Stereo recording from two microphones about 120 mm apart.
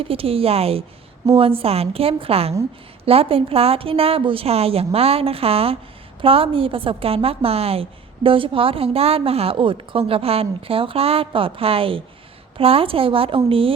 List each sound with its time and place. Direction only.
0.0 s a woman's voice: 50° right (ahead or behind)